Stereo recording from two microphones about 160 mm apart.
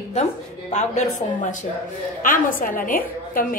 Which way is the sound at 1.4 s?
50° left (ahead or behind).